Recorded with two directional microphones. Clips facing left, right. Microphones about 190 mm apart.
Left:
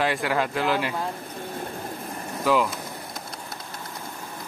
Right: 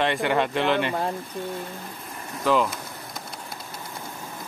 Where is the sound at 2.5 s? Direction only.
10° left (ahead or behind).